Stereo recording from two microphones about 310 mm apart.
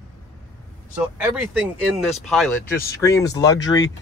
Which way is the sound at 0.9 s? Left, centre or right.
Centre.